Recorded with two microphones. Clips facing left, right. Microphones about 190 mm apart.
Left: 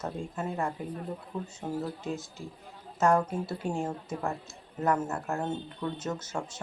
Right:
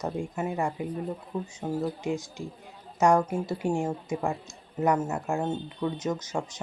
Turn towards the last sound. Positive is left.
turn(degrees=-15)  # may be behind; listen again after turning